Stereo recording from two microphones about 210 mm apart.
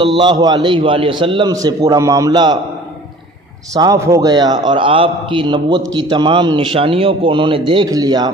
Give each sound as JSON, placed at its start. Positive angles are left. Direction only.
{"t": 0.0, "sound": "a man's voice", "side_deg": -20}
{"t": 3.7, "sound": "a man's voice", "side_deg": -15}
{"t": 5.8, "sound": "a man's voice", "side_deg": -60}
{"t": 6.0, "sound": "a man's voice", "side_deg": -20}